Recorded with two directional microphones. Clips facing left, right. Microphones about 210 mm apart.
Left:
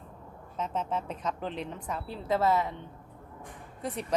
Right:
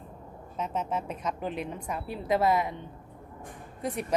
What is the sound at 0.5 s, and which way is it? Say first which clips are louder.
Speech: right 1 dB; 10° right (ahead or behind).